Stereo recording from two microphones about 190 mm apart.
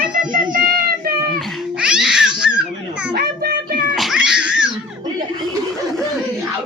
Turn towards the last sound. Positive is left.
turn(degrees=-5)  # may be behind; listen again after turning